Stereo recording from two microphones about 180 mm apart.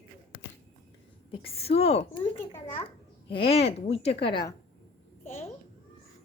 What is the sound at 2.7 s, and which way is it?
A child's voice, 30° left (ahead or behind).